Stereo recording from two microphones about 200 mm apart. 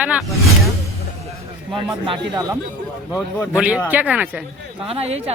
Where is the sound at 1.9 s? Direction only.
20° right (ahead or behind).